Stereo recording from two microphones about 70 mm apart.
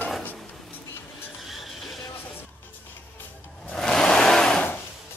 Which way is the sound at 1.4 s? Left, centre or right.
Centre.